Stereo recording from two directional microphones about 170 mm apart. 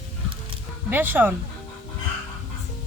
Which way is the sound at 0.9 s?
10° right (ahead or behind).